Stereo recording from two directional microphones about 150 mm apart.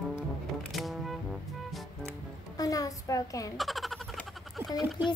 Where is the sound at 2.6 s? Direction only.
25° left (ahead or behind).